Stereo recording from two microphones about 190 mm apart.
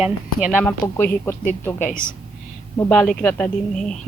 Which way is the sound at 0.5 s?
10° left (ahead or behind).